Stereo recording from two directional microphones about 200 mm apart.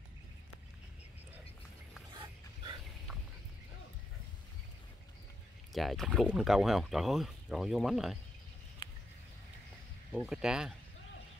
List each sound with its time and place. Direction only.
5.7 s speech: centre (ahead or behind)
8.8 s a sound: 20° left (ahead or behind)
10.1 s speech: 5° right (ahead or behind)